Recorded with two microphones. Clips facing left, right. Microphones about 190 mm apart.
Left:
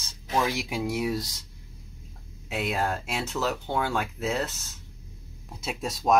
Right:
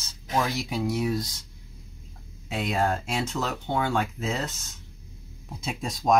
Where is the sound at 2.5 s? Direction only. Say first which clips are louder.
Right 2 dB; 5° left (ahead or behind).